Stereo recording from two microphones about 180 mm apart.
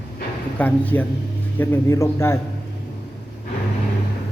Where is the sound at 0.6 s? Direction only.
10° left (ahead or behind).